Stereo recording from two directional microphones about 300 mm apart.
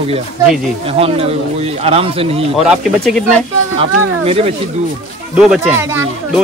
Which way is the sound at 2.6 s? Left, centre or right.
Centre.